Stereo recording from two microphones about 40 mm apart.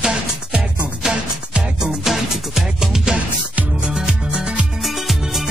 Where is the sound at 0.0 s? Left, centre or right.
Right.